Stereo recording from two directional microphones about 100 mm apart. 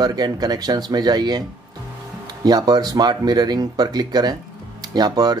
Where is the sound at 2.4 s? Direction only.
40° right (ahead or behind).